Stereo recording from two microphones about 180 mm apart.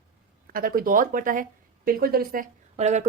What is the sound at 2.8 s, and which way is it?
Speech, 40° right (ahead or behind).